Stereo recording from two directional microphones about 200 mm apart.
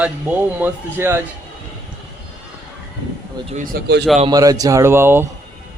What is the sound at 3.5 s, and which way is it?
Speech, 45° right (ahead or behind).